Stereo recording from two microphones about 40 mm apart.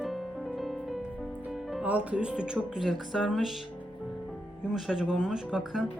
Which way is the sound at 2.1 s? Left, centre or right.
Right.